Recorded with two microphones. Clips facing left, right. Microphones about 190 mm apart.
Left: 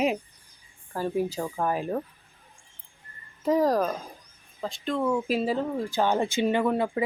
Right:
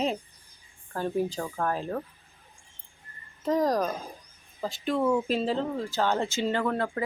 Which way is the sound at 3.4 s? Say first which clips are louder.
Left 2 dB; 10° left (ahead or behind).